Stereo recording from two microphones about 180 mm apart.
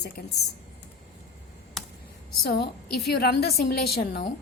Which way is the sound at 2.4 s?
60° left (ahead or behind).